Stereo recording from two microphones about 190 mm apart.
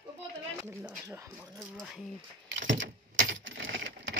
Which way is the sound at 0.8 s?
10° right (ahead or behind).